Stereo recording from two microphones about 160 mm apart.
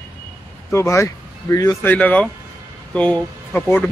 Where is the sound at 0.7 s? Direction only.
15° left (ahead or behind).